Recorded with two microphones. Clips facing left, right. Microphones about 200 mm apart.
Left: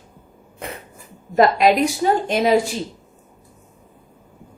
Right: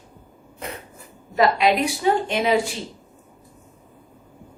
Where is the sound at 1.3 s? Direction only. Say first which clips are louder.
Left 4 dB; 45° left (ahead or behind).